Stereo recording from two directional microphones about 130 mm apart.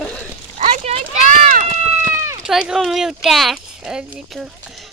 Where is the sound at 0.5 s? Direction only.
55° right (ahead or behind).